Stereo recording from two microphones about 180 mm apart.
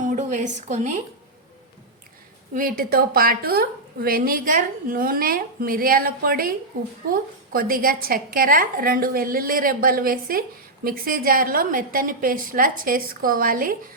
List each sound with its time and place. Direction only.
0.0 s a woman's voice: 45° right (ahead or behind)
2.6 s a woman's voice: 55° right (ahead or behind)